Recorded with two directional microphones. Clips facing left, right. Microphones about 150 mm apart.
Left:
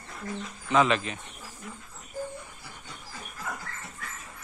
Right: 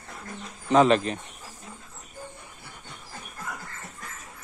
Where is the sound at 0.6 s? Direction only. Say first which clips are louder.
Right 5 dB; 35° right (ahead or behind).